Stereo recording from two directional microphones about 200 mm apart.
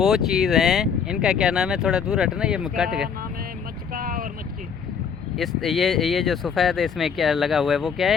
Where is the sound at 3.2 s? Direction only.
45° right (ahead or behind).